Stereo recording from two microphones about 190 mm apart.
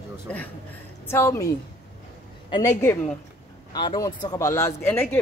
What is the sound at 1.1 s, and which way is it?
Speech, 15° left (ahead or behind).